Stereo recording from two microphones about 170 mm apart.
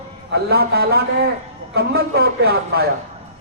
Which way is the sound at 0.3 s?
70° right (ahead or behind).